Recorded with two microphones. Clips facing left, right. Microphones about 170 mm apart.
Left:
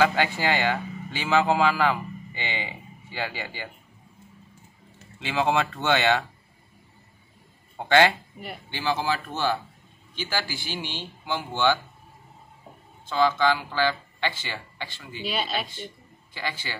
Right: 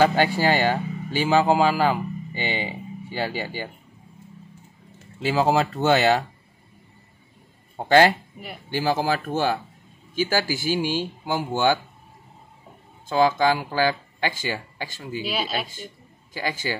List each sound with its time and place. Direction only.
0.0 s speech: 35° right (ahead or behind)
5.2 s speech: 35° right (ahead or behind)
7.7 s speech: 40° right (ahead or behind)
13.1 s speech: 45° right (ahead or behind)
15.2 s speech: 5° right (ahead or behind)
16.3 s speech: 45° right (ahead or behind)